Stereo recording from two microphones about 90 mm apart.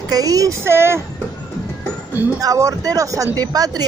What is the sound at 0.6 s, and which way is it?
Speech, 30° right (ahead or behind).